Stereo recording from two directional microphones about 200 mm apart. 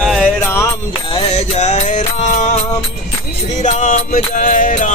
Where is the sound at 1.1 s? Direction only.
30° left (ahead or behind).